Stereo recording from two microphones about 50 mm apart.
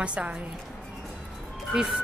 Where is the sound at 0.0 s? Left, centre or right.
Right.